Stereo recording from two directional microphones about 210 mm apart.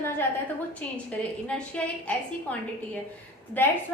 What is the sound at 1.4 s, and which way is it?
A woman's voice, 5° left (ahead or behind).